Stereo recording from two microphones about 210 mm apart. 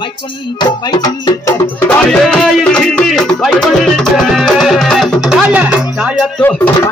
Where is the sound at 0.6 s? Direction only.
20° left (ahead or behind).